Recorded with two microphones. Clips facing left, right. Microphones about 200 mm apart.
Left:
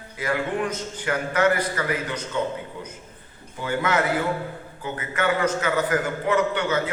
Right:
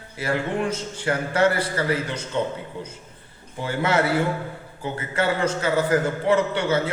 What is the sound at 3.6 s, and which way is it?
A man's voice, 30° right (ahead or behind).